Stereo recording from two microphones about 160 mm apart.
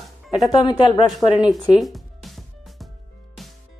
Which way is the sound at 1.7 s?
Centre (ahead or behind).